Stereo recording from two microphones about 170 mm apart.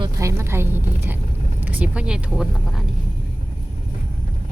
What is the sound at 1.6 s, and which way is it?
Speech, 10° right (ahead or behind).